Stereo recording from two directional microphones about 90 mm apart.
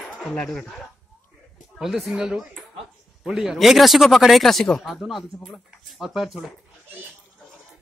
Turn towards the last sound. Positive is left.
turn(degrees=-5)  # may be behind; listen again after turning